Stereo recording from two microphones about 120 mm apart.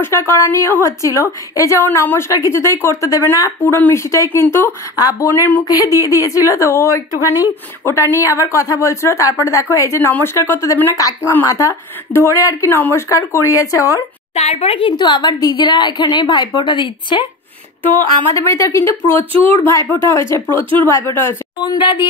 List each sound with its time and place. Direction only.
0.0 s a woman's voice: 20° left (ahead or behind)
4.9 s a woman's voice: 30° left (ahead or behind)
14.3 s speech: 60° left (ahead or behind)
14.8 s a woman's voice: 40° left (ahead or behind)
18.3 s a woman's voice: 25° left (ahead or behind)
21.6 s a woman's voice: 40° left (ahead or behind)